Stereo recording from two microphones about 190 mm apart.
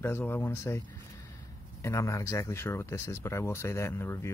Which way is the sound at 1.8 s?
15° left (ahead or behind).